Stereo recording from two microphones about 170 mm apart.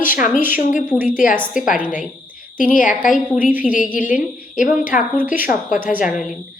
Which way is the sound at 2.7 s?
50° left (ahead or behind).